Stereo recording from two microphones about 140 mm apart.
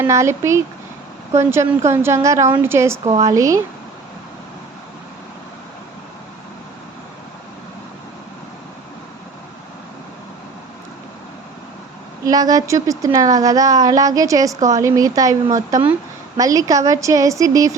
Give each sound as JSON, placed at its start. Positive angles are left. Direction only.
{"t": 0.0, "sound": "a woman's voice", "side_deg": -20}
{"t": 3.0, "sound": "speech", "side_deg": -50}
{"t": 3.2, "sound": "a woman's voice", "side_deg": -25}
{"t": 12.2, "sound": "a woman's voice", "side_deg": -25}